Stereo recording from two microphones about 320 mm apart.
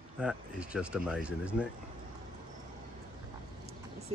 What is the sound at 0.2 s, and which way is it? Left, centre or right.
Speech, centre.